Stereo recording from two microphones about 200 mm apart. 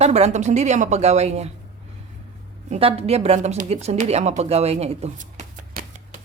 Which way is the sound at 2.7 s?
30° right (ahead or behind).